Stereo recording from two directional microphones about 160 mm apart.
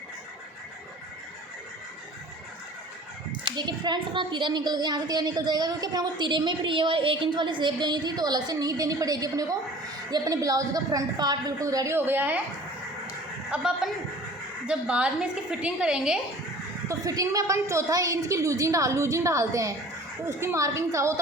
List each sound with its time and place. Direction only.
3.4 s a woman's voice: 25° right (ahead or behind); by 12.4 s 10° right (ahead or behind)
13.5 s a woman's voice: 5° right (ahead or behind)
16.9 s a woman's voice: 20° right (ahead or behind)